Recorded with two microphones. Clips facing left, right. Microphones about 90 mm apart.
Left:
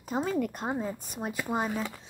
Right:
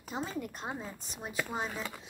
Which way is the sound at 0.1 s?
60° left (ahead or behind).